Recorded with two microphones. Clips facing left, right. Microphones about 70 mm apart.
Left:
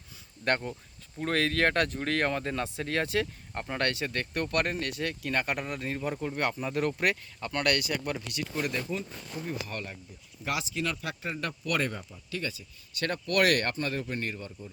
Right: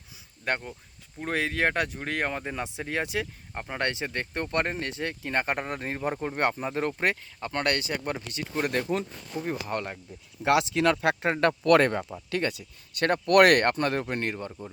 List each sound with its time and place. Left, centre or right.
0.4 s speech: centre; by 8.7 s right
8.7 s speech: right
10.4 s speech: right
13.0 s speech: right